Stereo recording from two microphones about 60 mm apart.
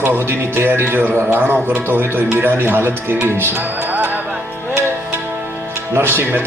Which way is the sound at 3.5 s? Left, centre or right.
Right.